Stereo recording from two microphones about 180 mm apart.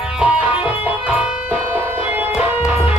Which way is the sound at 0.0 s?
5° right (ahead or behind).